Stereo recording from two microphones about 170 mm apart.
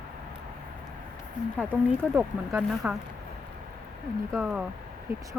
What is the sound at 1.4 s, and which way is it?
Speech, 50° left (ahead or behind).